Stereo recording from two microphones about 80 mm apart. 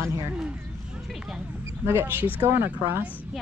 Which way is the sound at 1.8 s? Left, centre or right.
Right.